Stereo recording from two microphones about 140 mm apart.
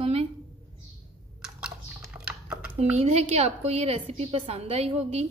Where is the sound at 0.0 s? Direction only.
45° right (ahead or behind).